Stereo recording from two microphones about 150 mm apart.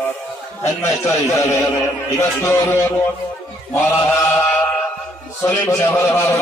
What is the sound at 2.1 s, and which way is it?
Speech, 15° left (ahead or behind).